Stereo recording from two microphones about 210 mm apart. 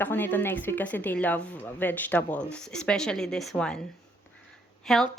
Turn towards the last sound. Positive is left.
turn(degrees=0)  # may be behind; listen again after turning